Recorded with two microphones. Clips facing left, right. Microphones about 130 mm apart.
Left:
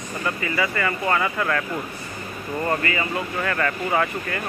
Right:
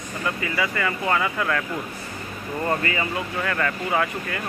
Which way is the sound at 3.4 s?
5° right (ahead or behind).